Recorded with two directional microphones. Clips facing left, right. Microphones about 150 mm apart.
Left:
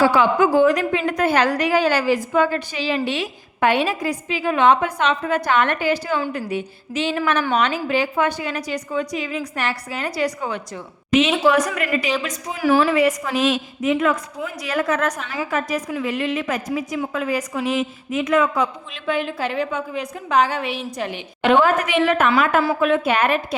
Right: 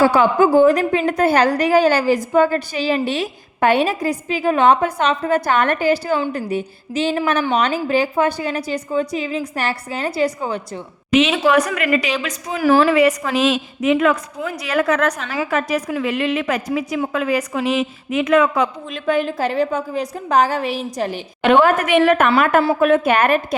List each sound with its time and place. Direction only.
0.0 s a woman's voice: 40° right (ahead or behind)
11.4 s a woman's voice: 65° right (ahead or behind)
18.9 s a woman's voice: 45° right (ahead or behind)
21.4 s a woman's voice: 60° right (ahead or behind)